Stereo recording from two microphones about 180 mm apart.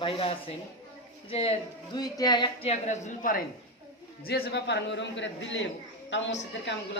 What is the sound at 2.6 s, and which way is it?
Speech, 40° left (ahead or behind).